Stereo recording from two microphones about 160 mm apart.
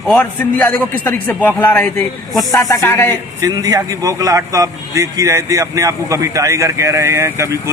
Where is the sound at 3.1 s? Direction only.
25° right (ahead or behind).